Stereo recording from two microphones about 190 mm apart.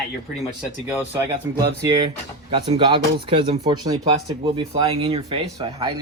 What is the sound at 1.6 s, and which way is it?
Speech, 20° right (ahead or behind).